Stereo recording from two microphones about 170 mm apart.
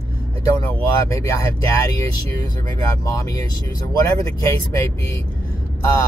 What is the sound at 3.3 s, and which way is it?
Speech, 20° left (ahead or behind).